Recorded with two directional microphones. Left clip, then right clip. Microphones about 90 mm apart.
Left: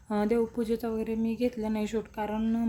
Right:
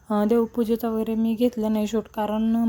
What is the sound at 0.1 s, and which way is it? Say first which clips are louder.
Speech: right 6 dB; 35° right (ahead or behind).